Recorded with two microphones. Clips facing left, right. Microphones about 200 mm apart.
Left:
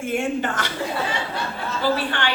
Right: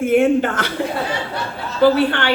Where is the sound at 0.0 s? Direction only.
55° right (ahead or behind).